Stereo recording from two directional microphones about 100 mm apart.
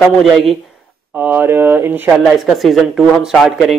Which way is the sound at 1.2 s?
20° right (ahead or behind).